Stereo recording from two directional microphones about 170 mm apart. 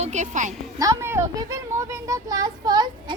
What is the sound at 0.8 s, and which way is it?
Speech, 15° right (ahead or behind).